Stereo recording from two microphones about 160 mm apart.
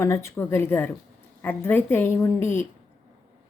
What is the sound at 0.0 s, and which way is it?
A woman's voice, 15° left (ahead or behind).